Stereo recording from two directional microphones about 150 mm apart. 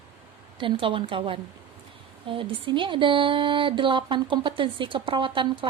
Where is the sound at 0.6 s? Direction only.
35° right (ahead or behind).